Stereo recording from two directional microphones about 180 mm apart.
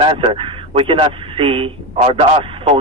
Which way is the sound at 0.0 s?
30° right (ahead or behind).